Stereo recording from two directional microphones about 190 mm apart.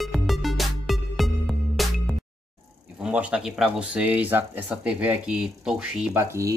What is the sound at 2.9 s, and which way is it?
Speech, 5° right (ahead or behind).